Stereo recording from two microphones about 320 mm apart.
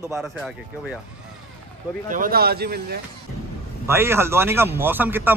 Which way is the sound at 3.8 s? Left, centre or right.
Centre.